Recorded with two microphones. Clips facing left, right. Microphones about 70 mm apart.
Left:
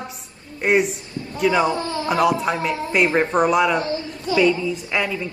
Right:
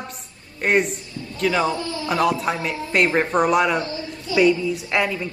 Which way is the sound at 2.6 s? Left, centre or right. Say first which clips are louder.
Left 1 dB; centre.